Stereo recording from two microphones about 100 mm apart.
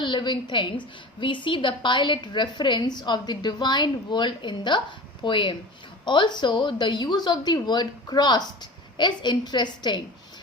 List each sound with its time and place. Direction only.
0.0 s a woman's voice: 50° left (ahead or behind)